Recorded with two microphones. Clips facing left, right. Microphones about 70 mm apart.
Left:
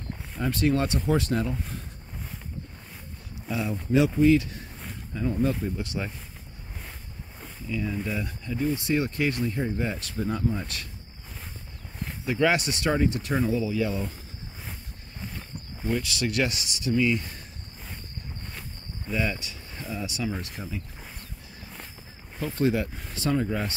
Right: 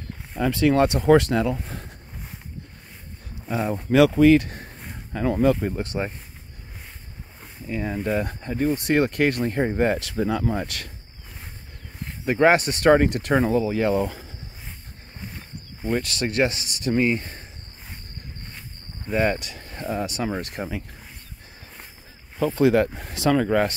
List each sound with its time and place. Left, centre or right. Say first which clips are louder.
0.4 s speech: right 6 dB; right
3.4 s speech: right 4 dB; right
3.9 s speech: right 5 dB; right
5.1 s speech: right 6 dB; right
5.8 s speech: right 5 dB; right
7.6 s speech: right 4 dB; right
9.9 s speech: right 6 dB; right
12.3 s speech: right 6 dB; right
12.9 s speech: right 6 dB; right
15.8 s speech: right 3 dB; right
19.0 s speech: right 7 dB; right
22.6 s speech: right 6 dB; right